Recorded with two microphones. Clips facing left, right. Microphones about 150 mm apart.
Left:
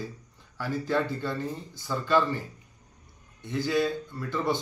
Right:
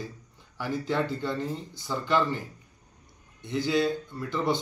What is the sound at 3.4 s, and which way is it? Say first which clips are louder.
A man's voice: right 1 dB; 20° right (ahead or behind).